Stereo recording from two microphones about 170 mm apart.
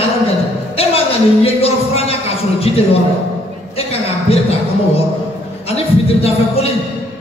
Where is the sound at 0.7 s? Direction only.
35° left (ahead or behind).